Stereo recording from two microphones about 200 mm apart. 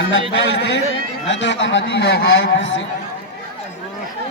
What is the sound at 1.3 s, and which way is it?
A man's voice, 65° left (ahead or behind).